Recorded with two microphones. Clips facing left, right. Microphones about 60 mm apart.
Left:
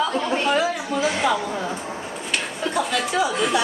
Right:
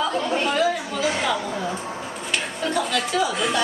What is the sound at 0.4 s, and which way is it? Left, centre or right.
Speech, centre.